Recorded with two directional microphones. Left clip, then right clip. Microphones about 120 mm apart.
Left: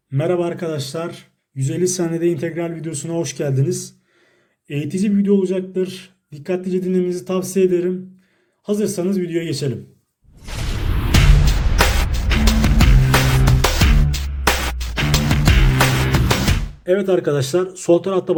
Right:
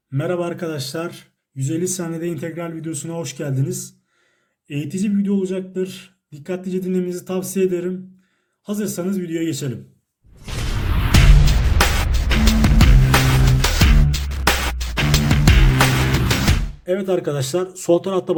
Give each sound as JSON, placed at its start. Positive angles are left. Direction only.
{"t": 0.1, "sound": "a man's voice", "side_deg": 15}
{"t": 0.3, "sound": "speech", "side_deg": 0}
{"t": 1.5, "sound": "speech", "side_deg": 5}
{"t": 1.8, "sound": "a man's voice", "side_deg": 25}
{"t": 11.1, "sound": "music", "side_deg": 0}
{"t": 16.8, "sound": "speech", "side_deg": 10}